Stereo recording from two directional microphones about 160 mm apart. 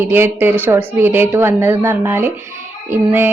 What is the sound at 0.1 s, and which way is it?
Speech, 15° right (ahead or behind).